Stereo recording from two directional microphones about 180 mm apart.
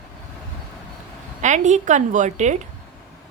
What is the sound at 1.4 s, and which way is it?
A woman's voice, 40° right (ahead or behind).